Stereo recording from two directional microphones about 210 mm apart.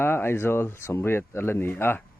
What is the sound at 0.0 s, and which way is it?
Speech, 10° left (ahead or behind).